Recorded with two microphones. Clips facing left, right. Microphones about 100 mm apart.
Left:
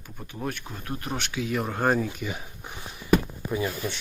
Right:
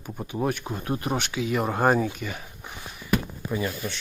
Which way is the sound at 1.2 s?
Centre (ahead or behind).